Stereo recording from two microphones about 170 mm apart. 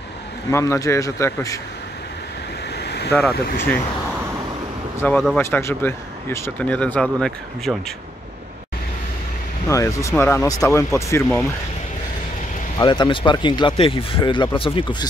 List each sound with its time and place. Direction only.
0.5 s speech: 15° left (ahead or behind)
2.8 s vehicle: 75° left (ahead or behind)
3.1 s speech: 15° left (ahead or behind)
5.0 s speech: 10° left (ahead or behind)
9.7 s speech: 20° left (ahead or behind)
12.7 s speech: 25° left (ahead or behind)